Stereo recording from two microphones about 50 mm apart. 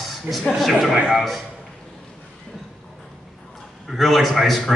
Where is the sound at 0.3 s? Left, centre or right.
Centre.